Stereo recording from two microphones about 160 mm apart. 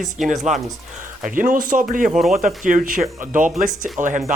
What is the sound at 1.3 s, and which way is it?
Speech, 55° right (ahead or behind).